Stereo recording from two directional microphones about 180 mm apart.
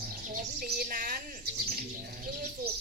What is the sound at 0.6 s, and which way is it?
Speech, 50° right (ahead or behind).